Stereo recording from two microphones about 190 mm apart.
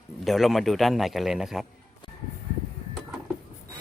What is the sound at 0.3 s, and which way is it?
Speech, centre (ahead or behind).